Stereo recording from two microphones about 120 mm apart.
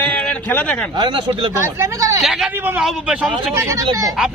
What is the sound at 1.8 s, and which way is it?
Speech, 25° right (ahead or behind).